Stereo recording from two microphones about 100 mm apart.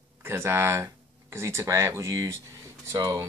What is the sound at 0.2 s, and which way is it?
Speech, 25° right (ahead or behind).